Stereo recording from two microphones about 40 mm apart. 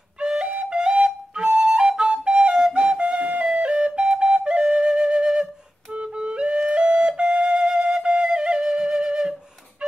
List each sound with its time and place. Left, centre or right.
0.2 s flute: right
6.1 s music: right
6.7 s flute: right